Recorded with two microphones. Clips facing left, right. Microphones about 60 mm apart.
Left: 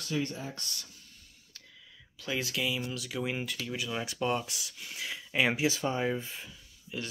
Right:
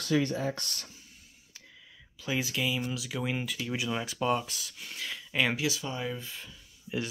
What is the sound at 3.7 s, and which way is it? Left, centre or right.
Speech, centre.